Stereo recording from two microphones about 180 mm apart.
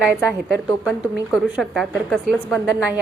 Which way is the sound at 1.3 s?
Centre (ahead or behind).